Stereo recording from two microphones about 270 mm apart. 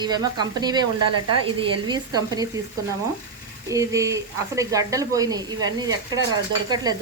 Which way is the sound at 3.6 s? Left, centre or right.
Centre.